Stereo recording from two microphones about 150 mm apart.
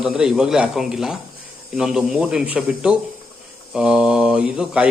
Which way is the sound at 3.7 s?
5° right (ahead or behind).